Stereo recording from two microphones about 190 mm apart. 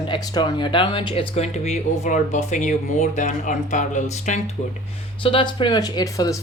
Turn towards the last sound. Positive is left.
turn(degrees=15)  # may be behind; listen again after turning